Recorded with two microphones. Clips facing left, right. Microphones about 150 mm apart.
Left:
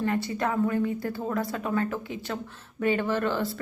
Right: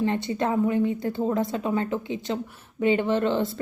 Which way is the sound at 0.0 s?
20° right (ahead or behind).